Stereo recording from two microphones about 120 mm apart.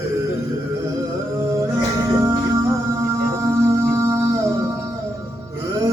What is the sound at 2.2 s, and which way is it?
Music, 30° right (ahead or behind).